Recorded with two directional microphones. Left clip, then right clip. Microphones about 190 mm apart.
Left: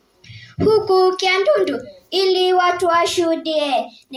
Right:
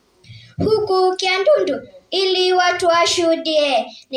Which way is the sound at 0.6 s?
30° right (ahead or behind).